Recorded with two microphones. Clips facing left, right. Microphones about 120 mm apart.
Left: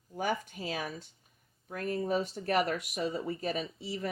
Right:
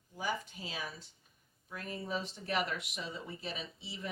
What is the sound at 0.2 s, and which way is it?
Speech, 55° left (ahead or behind).